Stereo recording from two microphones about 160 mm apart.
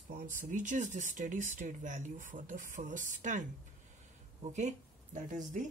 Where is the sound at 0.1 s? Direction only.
55° right (ahead or behind).